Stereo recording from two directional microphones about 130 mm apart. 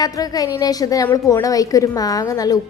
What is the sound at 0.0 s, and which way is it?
A woman's voice, 30° left (ahead or behind).